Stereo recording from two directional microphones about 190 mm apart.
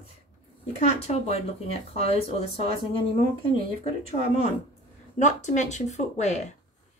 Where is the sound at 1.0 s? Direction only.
35° left (ahead or behind).